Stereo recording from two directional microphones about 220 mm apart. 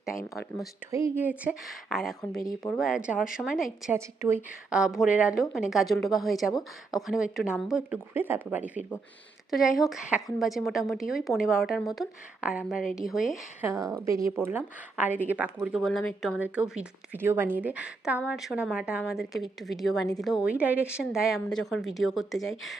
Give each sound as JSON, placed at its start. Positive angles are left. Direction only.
{"t": 0.9, "sound": "speech", "side_deg": -15}
{"t": 2.4, "sound": "speech", "side_deg": 15}
{"t": 2.7, "sound": "speech", "side_deg": 0}
{"t": 13.7, "sound": "speech", "side_deg": -15}